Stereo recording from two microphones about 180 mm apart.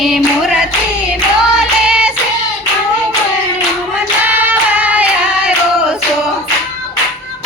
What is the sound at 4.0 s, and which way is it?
Singing, 10° right (ahead or behind).